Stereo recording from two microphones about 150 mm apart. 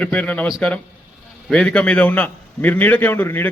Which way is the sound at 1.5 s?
5° left (ahead or behind).